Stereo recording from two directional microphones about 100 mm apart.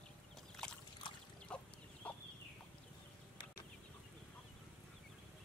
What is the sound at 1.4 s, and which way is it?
Chicken, 10° left (ahead or behind).